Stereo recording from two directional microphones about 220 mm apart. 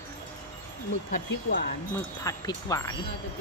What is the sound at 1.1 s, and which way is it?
Speech, 45° left (ahead or behind).